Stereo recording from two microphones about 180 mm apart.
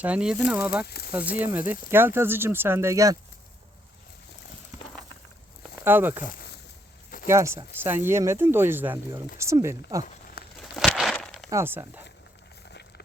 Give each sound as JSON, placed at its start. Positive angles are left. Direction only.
{"t": 0.0, "sound": "speech", "side_deg": -5}
{"t": 0.9, "sound": "speech", "side_deg": 60}
{"t": 1.1, "sound": "speech", "side_deg": -10}
{"t": 5.8, "sound": "speech", "side_deg": -10}
{"t": 7.3, "sound": "speech", "side_deg": -15}
{"t": 10.6, "sound": "a sound", "side_deg": 0}
{"t": 11.4, "sound": "speech", "side_deg": -15}